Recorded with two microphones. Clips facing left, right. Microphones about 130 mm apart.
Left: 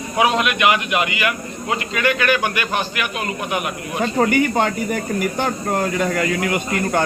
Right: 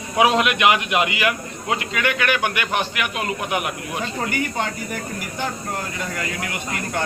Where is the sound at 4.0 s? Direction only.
60° left (ahead or behind).